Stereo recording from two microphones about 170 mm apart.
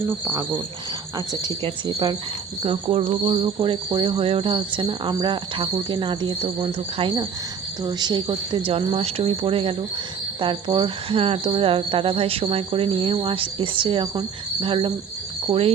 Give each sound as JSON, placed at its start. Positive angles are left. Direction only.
{"t": 0.0, "sound": "speech", "side_deg": -15}
{"t": 2.6, "sound": "speech", "side_deg": -35}